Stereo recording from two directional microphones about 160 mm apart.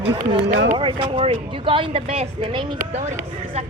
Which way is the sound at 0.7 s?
30° right (ahead or behind).